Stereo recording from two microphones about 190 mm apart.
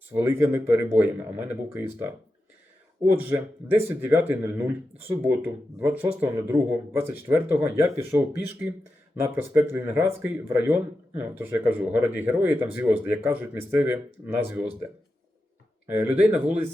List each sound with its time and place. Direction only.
0.1 s speech: 10° right (ahead or behind)
3.1 s speech: 10° right (ahead or behind)
9.2 s speech: 10° right (ahead or behind)
15.9 s speech: 10° right (ahead or behind)